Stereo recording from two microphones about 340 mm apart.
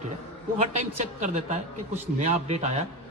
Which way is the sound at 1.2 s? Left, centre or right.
Right.